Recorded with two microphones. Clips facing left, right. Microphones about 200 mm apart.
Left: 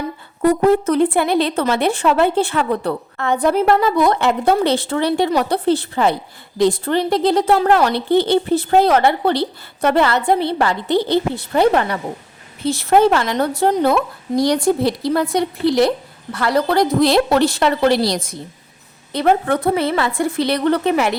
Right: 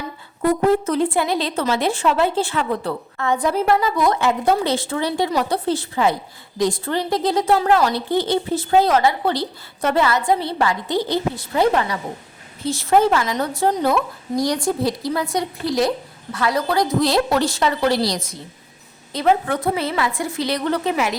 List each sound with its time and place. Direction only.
0.4 s speech: 60° left (ahead or behind)